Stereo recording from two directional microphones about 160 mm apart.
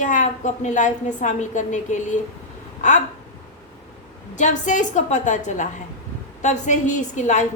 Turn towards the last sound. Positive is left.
turn(degrees=50)  # may be behind; listen again after turning